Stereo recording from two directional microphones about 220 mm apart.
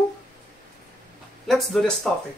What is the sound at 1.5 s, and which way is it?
Speech, centre (ahead or behind).